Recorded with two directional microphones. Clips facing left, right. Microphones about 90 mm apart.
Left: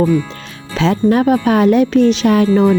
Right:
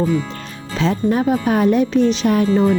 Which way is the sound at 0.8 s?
85° left.